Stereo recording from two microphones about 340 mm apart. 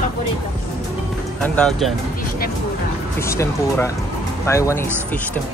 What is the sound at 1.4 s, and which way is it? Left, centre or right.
Speech, centre.